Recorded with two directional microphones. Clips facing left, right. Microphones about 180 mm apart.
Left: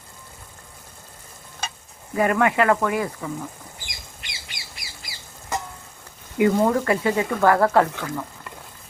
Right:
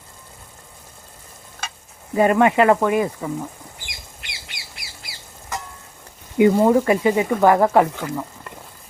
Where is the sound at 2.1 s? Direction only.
25° right (ahead or behind).